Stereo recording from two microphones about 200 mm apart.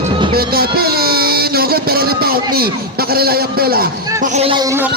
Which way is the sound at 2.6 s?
50° right (ahead or behind).